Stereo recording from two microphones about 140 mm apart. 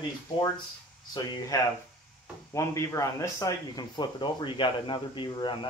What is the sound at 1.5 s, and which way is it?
Speech, 25° left (ahead or behind).